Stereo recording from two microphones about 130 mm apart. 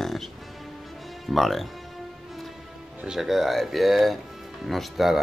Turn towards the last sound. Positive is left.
turn(degrees=0)  # may be behind; listen again after turning